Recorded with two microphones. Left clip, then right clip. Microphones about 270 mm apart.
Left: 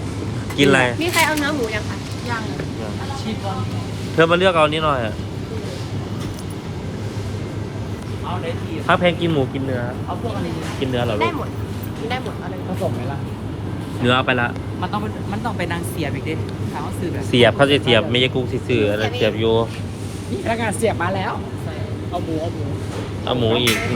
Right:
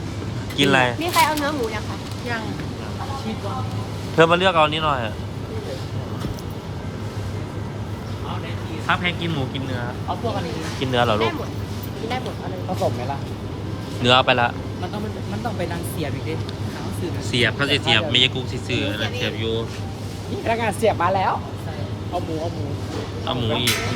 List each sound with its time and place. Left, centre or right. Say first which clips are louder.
0.5 s speech: left 2 dB; centre
4.2 s speech: left 1 dB; centre
8.9 s speech: left 6 dB; centre
10.8 s speech: right 3 dB; right
14.0 s speech: right 2 dB; centre
17.3 s speech: left 6 dB; centre
20.4 s speech: even; right
23.2 s speech: left 5 dB; centre